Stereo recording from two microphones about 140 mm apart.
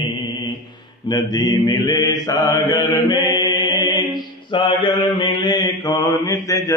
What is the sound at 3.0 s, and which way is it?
Chant, 30° left (ahead or behind).